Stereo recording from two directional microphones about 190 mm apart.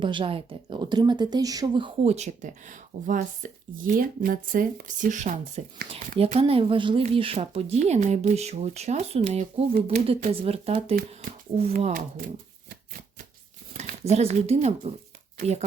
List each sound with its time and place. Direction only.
0.0 s a woman's voice: 25° right (ahead or behind)
11.8 s speech: 45° right (ahead or behind)
13.7 s a woman's voice: 35° right (ahead or behind)